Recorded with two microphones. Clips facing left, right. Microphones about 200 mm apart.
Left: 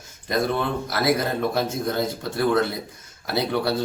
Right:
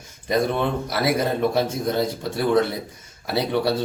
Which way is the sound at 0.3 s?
5° right (ahead or behind).